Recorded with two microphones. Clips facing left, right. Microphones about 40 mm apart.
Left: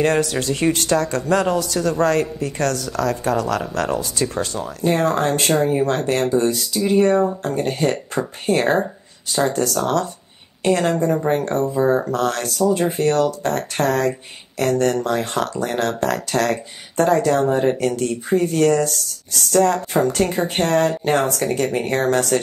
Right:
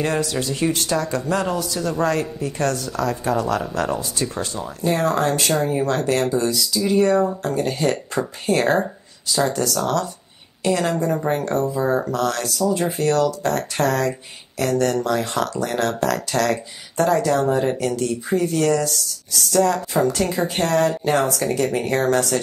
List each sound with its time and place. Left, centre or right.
0.0 s a man's voice: left